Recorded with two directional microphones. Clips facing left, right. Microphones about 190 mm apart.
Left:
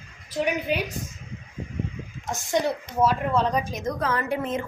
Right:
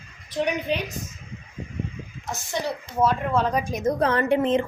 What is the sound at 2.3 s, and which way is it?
Speech, 20° left (ahead or behind).